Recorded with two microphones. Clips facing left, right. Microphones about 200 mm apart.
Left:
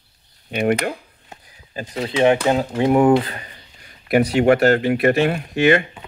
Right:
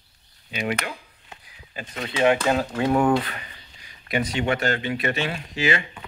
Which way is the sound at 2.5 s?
25° left (ahead or behind).